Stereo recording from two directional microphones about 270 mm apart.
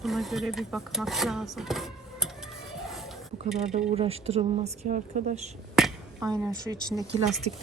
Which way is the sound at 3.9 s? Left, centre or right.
Right.